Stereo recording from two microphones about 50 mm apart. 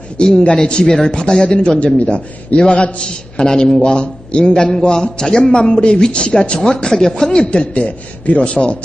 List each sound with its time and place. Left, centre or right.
0.2 s a man's voice: centre
7.5 s a man's voice: left